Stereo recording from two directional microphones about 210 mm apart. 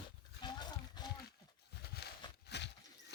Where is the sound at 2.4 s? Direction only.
55° left (ahead or behind).